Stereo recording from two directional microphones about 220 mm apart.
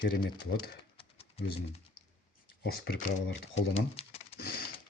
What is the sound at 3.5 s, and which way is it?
Pigeon, 25° left (ahead or behind).